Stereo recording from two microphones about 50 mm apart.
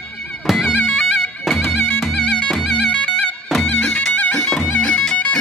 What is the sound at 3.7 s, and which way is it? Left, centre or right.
Music, left.